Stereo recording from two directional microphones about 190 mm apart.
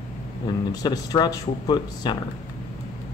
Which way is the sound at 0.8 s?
20° left (ahead or behind).